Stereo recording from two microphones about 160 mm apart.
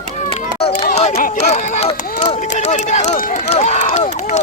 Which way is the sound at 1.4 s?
45° left (ahead or behind).